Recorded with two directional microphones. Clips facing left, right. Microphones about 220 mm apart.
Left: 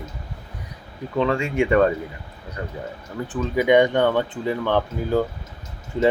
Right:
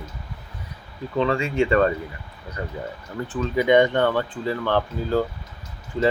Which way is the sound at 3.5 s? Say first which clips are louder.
Left 1 dB; 15° left (ahead or behind).